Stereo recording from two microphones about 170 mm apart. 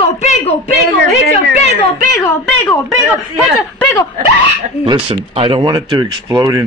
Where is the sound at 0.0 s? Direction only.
40° left (ahead or behind).